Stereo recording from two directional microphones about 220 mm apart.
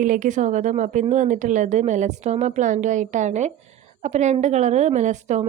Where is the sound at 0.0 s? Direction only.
35° right (ahead or behind).